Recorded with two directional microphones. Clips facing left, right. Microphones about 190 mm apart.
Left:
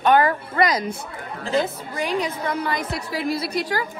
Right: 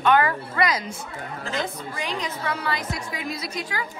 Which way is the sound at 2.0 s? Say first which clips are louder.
Left 6 dB; 10° left (ahead or behind).